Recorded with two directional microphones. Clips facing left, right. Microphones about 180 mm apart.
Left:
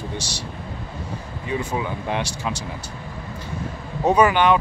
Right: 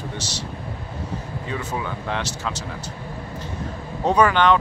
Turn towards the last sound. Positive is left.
turn(degrees=10)  # may be behind; listen again after turning